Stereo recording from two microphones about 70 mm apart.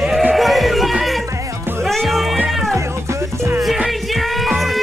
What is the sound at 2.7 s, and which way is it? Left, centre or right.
Music, right.